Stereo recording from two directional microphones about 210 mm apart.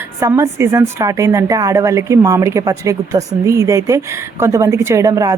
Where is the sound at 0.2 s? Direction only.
15° right (ahead or behind).